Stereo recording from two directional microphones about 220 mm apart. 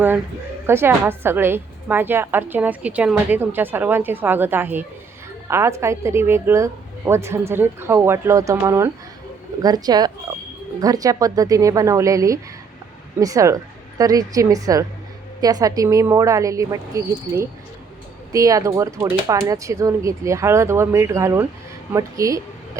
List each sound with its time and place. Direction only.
0.7 s a woman's voice: 10° right (ahead or behind)